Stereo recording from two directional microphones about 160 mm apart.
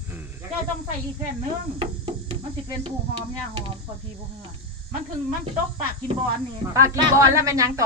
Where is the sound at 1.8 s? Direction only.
35° right (ahead or behind).